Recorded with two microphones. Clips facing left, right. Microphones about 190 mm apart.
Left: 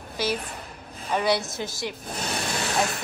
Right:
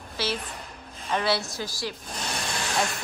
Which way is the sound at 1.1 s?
15° left (ahead or behind).